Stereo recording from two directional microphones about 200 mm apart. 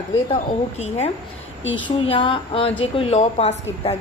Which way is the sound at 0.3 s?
35° left (ahead or behind).